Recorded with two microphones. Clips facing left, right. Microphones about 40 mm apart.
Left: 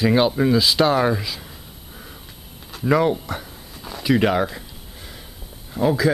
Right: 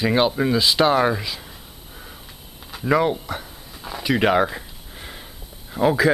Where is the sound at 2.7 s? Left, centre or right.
Centre.